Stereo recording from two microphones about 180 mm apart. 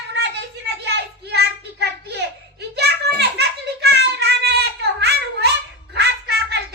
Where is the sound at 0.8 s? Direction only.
65° right (ahead or behind).